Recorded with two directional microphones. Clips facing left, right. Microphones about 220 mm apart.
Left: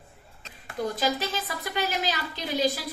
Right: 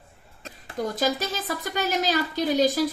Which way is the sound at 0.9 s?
45° right (ahead or behind).